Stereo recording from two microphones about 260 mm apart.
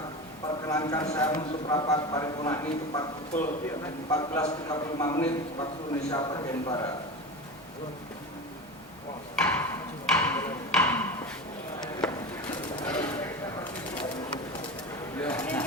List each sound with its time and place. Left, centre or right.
0.7 s a man's voice: centre
9.3 s tick-tock: centre
12.8 s a sound: centre
15.2 s speech: centre